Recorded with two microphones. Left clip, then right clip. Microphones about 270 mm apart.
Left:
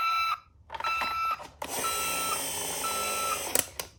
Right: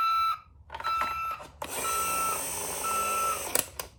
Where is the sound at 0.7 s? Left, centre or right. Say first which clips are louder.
Even; centre.